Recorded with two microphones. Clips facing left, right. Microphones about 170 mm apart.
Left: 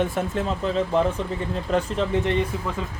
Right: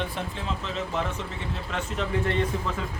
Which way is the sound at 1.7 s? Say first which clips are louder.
Left 10 dB; 35° left (ahead or behind).